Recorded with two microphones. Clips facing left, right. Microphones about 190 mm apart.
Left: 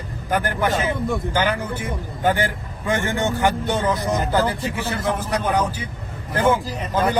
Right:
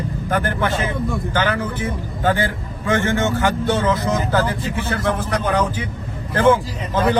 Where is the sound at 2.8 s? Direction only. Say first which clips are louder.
Right 3 dB; 15° left (ahead or behind).